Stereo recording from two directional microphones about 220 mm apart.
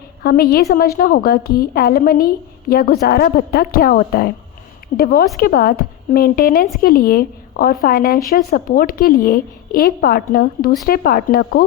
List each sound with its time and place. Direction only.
0.2 s a woman's voice: 45° left (ahead or behind)